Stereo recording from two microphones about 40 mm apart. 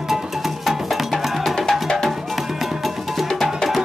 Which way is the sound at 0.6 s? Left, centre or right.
Centre.